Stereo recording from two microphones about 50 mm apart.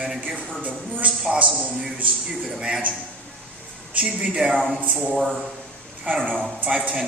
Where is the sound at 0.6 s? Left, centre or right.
Right.